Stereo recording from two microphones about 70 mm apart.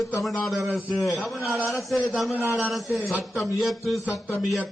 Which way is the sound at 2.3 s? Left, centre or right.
Right.